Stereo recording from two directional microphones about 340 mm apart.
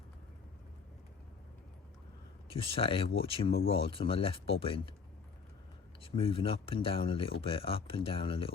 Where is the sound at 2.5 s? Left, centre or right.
Centre.